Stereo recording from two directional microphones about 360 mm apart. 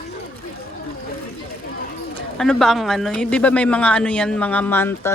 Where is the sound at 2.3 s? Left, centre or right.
Centre.